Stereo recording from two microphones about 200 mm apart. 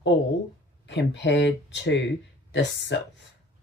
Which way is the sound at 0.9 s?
60° left (ahead or behind).